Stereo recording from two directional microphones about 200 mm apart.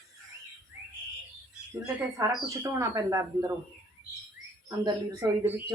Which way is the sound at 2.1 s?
15° right (ahead or behind).